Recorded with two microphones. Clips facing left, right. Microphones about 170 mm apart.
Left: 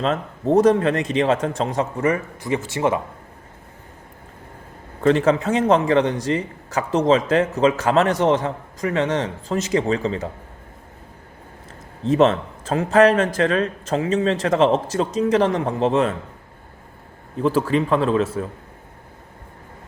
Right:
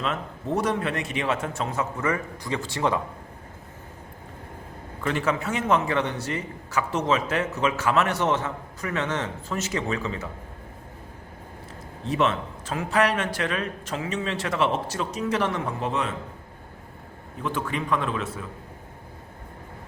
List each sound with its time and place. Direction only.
0.0 s a man's voice: 35° left (ahead or behind)
4.9 s a man's voice: 35° left (ahead or behind)
12.1 s a man's voice: 35° left (ahead or behind)
17.4 s a man's voice: 35° left (ahead or behind)